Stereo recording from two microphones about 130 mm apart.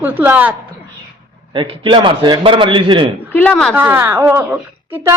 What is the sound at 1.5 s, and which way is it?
A man's voice, 40° right (ahead or behind).